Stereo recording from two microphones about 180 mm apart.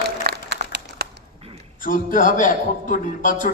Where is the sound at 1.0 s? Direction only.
65° right (ahead or behind).